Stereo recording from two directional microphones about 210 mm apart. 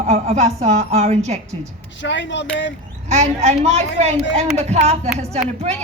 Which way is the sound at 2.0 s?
60° left (ahead or behind).